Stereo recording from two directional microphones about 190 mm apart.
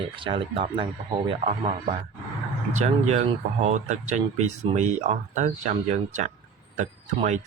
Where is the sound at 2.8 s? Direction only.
35° right (ahead or behind).